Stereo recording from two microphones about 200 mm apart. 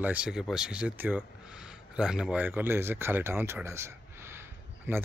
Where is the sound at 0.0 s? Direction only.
5° right (ahead or behind).